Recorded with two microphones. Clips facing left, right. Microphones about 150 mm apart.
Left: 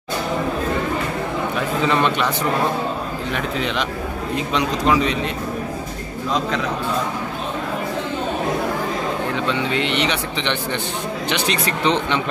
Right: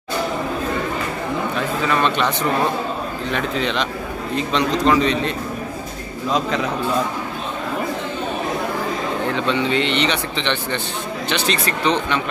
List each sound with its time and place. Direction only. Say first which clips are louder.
1.9 s speech: even; 15° left (ahead or behind)
3.3 s speech: right 2 dB; 5° left (ahead or behind)
9.3 s speech: right 2 dB; 5° left (ahead or behind)